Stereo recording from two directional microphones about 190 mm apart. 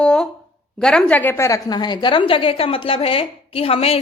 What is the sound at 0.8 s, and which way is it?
A woman's voice, 5° left (ahead or behind).